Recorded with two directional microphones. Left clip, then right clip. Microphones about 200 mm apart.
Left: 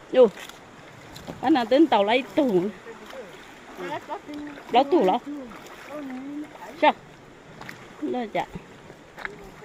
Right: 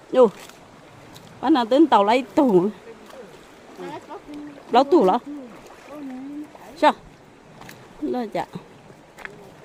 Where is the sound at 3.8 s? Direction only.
20° left (ahead or behind).